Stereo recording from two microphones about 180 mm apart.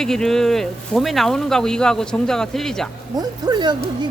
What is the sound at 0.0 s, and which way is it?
Speech, 5° left (ahead or behind).